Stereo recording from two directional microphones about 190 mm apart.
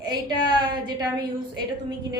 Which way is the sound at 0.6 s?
25° right (ahead or behind).